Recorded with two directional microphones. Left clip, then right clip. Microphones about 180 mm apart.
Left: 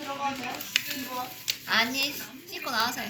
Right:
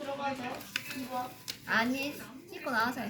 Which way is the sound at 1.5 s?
50° right (ahead or behind).